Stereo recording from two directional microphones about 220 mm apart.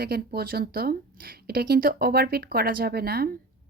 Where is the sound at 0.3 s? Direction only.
45° right (ahead or behind).